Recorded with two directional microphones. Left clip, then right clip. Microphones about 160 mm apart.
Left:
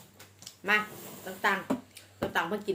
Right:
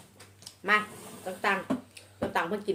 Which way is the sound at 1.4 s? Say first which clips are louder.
Even; 15° left (ahead or behind).